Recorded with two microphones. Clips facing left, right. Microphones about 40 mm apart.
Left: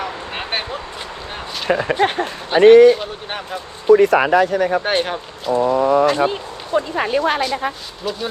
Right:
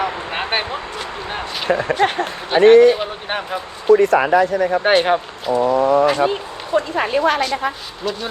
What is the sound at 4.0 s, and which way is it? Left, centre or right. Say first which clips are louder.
Speech: even; left.